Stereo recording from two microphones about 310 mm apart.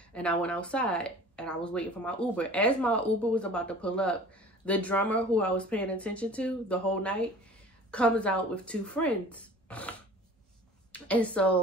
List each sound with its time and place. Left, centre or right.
0.1 s a woman's voice: centre